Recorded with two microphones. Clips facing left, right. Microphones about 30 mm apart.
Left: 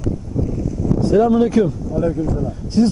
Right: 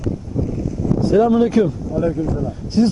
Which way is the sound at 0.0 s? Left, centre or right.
Centre.